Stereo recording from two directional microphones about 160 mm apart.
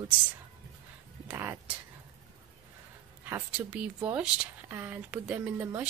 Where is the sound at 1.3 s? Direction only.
10° right (ahead or behind).